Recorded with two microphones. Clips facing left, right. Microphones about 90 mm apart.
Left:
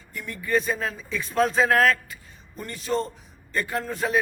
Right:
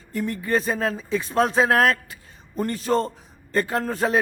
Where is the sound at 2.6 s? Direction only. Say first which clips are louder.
Right 5 dB; 45° right (ahead or behind).